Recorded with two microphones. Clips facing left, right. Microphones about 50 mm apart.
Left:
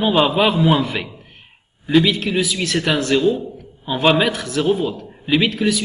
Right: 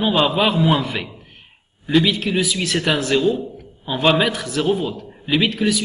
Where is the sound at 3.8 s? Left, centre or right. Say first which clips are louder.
Left 1 dB; centre.